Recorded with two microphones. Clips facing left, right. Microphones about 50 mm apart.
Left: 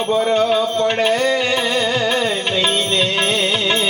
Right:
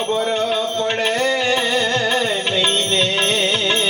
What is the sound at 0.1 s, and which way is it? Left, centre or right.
Music, centre.